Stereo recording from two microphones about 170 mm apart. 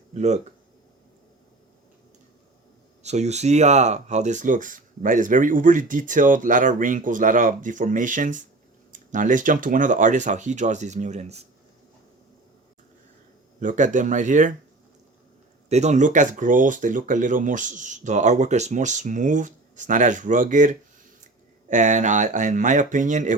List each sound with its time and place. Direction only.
0.1 s speech: 40° right (ahead or behind)
3.0 s speech: 40° right (ahead or behind)
13.6 s speech: 50° right (ahead or behind)
15.7 s speech: 45° right (ahead or behind)